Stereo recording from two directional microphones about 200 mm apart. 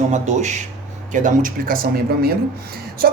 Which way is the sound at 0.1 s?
35° right (ahead or behind).